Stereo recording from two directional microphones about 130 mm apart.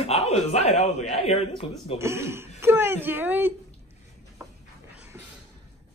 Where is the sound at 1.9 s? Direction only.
20° right (ahead or behind).